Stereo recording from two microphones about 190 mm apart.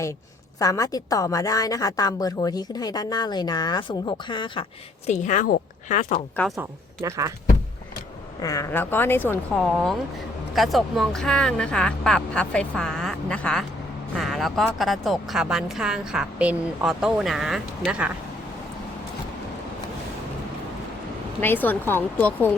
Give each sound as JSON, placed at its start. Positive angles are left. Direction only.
{"t": 0.6, "sound": "a woman's voice", "side_deg": 20}
{"t": 5.0, "sound": "a woman's voice", "side_deg": 40}
{"t": 6.6, "sound": "speech", "side_deg": -15}
{"t": 8.4, "sound": "a woman's voice", "side_deg": 15}
{"t": 21.4, "sound": "a woman's voice", "side_deg": 10}